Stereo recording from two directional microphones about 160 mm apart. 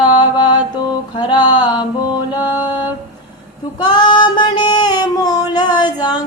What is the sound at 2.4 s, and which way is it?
Mantra, 10° right (ahead or behind).